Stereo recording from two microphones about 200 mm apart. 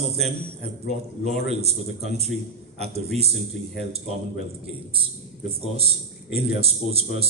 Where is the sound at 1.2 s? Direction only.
30° right (ahead or behind).